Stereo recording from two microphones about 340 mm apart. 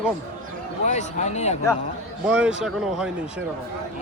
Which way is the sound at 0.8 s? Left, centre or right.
Centre.